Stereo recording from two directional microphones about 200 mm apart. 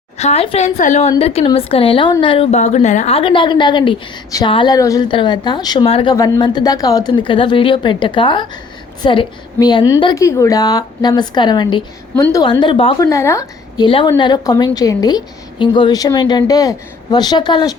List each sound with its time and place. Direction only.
0.2 s a woman's voice: 30° left (ahead or behind)